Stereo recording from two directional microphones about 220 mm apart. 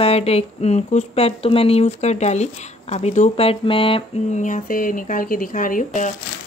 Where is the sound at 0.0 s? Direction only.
30° left (ahead or behind).